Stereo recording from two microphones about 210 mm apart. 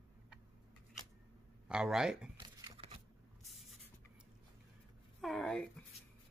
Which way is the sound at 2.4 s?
20° right (ahead or behind).